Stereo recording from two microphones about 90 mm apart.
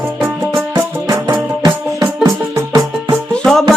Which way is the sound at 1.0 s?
40° right (ahead or behind).